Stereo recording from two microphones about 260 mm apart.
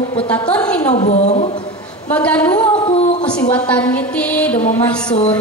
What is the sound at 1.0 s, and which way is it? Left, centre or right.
Speech, left.